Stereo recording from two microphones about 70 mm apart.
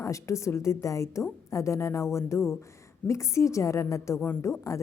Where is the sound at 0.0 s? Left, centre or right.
Left.